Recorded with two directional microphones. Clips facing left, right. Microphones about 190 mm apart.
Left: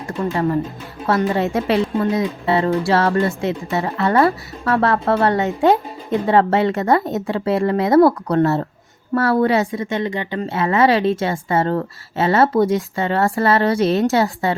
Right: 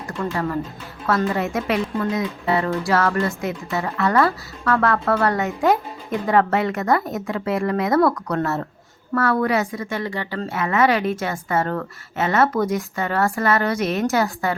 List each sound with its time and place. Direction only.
0.3 s speech: 30° left (ahead or behind)